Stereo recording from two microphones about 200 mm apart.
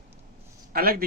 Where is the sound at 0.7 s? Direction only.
50° right (ahead or behind).